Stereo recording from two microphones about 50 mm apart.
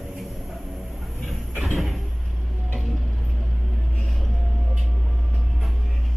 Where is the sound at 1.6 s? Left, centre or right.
Centre.